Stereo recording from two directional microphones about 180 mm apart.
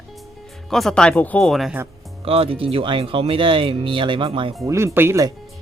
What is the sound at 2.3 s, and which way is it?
Speech, 30° right (ahead or behind).